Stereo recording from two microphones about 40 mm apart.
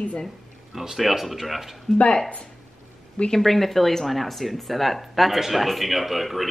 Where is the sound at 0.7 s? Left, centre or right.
Centre.